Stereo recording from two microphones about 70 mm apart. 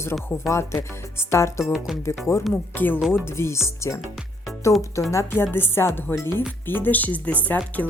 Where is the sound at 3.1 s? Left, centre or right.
Left.